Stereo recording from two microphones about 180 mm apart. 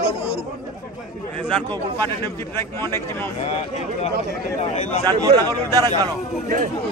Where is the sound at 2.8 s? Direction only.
15° left (ahead or behind).